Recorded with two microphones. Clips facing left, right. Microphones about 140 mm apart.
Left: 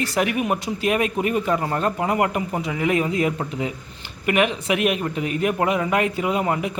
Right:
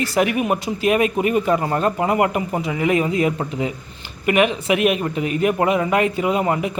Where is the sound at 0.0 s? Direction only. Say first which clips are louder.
Right 3 dB; 5° right (ahead or behind).